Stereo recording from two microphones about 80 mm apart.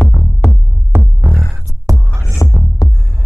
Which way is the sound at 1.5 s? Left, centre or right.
Right.